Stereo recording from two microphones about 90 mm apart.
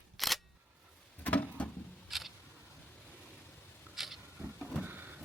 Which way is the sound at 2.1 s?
Centre (ahead or behind).